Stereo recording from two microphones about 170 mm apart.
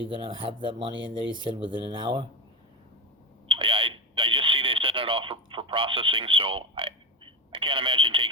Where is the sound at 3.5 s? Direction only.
30° right (ahead or behind).